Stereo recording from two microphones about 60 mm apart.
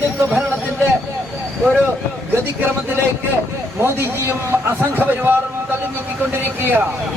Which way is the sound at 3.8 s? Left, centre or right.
Right.